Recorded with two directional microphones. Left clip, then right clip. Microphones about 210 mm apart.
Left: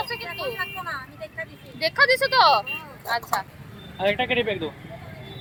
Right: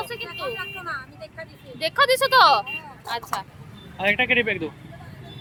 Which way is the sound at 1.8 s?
25° right (ahead or behind).